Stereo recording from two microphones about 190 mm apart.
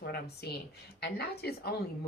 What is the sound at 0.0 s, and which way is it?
A woman's voice, 60° left (ahead or behind).